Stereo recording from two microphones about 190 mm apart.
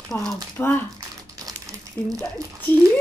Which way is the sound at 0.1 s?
10° left (ahead or behind).